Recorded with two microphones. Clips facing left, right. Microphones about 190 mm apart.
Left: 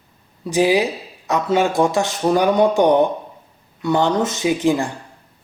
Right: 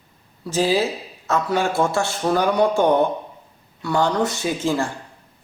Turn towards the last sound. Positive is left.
turn(degrees=15)  # may be behind; listen again after turning